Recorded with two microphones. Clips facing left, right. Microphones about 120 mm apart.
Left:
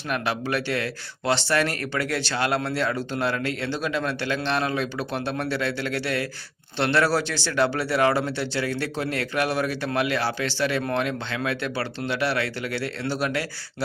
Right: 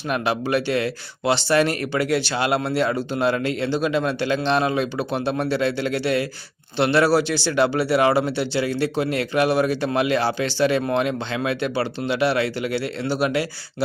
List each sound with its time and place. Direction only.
0.1 s speech: 20° right (ahead or behind)